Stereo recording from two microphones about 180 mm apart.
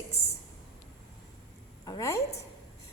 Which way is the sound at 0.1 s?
35° left (ahead or behind).